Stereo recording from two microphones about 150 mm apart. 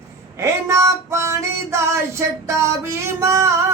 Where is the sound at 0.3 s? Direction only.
20° right (ahead or behind).